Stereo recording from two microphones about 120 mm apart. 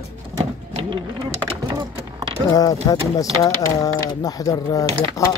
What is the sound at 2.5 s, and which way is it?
Speech, 30° left (ahead or behind).